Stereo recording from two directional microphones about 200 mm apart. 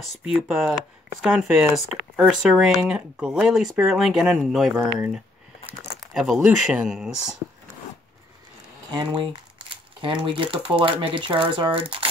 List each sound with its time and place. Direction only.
0.2 s speech: 5° right (ahead or behind)
8.9 s speech: 20° right (ahead or behind)